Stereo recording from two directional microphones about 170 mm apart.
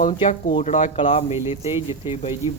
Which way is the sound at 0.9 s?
35° left (ahead or behind).